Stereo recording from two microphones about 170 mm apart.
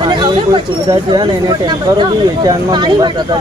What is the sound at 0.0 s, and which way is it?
Speech, 25° right (ahead or behind).